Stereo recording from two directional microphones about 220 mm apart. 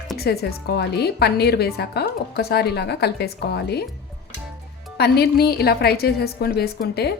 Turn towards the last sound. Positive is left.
turn(degrees=45)  # may be behind; listen again after turning